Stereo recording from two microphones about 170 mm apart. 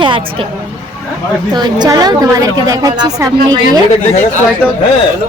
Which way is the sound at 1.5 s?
25° right (ahead or behind).